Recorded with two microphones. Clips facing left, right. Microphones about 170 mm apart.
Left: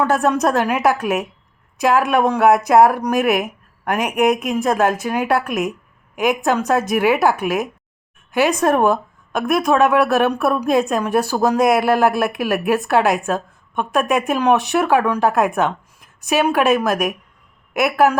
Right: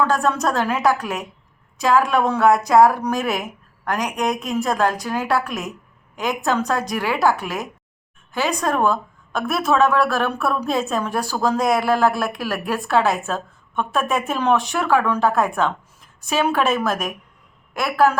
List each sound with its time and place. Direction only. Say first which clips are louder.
0.4 s speech: left 3 dB; 15° left (ahead or behind)